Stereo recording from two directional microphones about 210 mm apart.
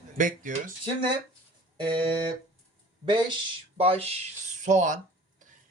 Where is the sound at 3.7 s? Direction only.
30° right (ahead or behind).